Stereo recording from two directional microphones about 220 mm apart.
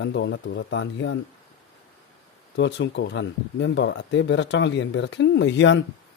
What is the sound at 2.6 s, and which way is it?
Speech, 55° left (ahead or behind).